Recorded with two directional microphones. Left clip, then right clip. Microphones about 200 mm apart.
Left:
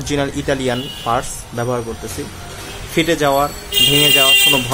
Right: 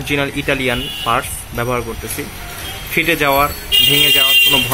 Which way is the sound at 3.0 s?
5° left (ahead or behind).